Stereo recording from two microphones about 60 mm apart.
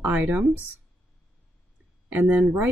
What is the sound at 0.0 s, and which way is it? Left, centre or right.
Speech, right.